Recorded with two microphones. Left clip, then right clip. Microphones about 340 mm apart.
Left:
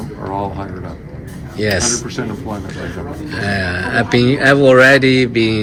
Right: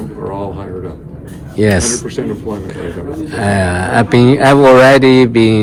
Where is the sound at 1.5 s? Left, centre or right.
Centre.